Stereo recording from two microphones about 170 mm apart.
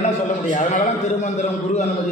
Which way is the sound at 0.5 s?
45° left (ahead or behind).